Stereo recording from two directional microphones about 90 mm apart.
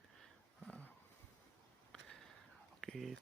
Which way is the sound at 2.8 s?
Centre (ahead or behind).